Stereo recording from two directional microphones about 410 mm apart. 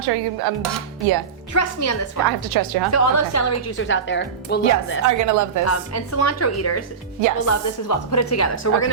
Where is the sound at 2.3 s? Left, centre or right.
Right.